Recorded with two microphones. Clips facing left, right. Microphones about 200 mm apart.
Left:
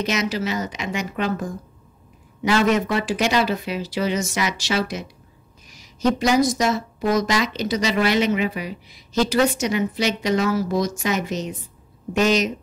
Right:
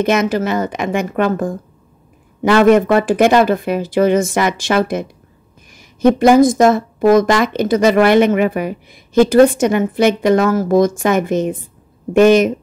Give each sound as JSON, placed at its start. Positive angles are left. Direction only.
{"t": 0.0, "sound": "a woman's voice", "side_deg": -55}